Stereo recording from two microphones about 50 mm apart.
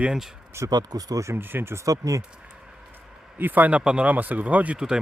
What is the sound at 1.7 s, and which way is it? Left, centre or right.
Speech, right.